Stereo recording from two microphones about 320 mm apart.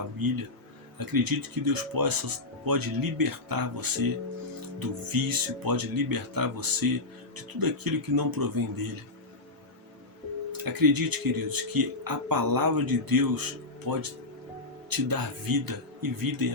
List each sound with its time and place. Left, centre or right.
0.2 s speech: right
10.6 s speech: right